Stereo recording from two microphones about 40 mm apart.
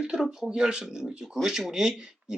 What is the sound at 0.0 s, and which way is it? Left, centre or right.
Speech, centre.